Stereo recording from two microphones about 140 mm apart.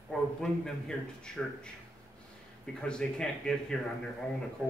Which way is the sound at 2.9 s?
5° left (ahead or behind).